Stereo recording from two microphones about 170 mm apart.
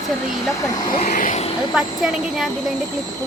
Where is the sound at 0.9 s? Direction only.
50° left (ahead or behind).